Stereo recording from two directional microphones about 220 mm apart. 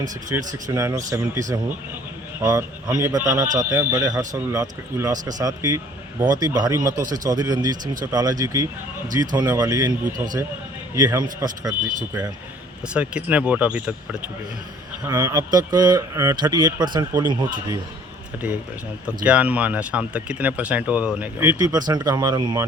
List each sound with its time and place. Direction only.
0.3 s speech: 15° right (ahead or behind)
10.9 s speech: 15° right (ahead or behind)
12.9 s speech: 5° right (ahead or behind)
19.0 s speech: 5° right (ahead or behind)